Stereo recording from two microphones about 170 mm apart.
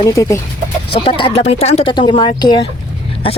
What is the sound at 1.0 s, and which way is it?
Speech, 30° left (ahead or behind).